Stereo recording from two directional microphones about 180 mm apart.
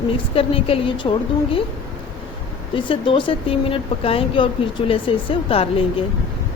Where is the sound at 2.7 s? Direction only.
30° left (ahead or behind).